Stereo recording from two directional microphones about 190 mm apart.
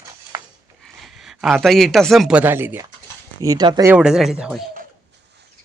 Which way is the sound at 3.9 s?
5° right (ahead or behind).